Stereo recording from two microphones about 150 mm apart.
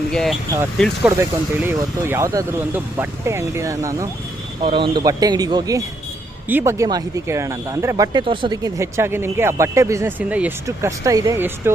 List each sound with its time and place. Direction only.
0.1 s speech: 5° left (ahead or behind)
1.0 s speech: 15° right (ahead or behind)
4.6 s speech: 35° right (ahead or behind)
6.5 s speech: 15° right (ahead or behind)
10.7 s speech: 20° right (ahead or behind)